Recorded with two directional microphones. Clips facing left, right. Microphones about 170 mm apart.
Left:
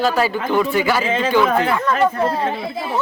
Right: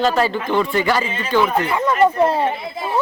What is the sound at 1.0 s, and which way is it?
Speech, 90° left.